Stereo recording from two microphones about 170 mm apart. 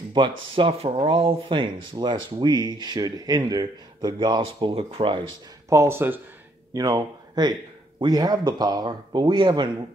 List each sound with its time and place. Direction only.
0.1 s speech: 30° right (ahead or behind)
5.7 s speech: 15° right (ahead or behind)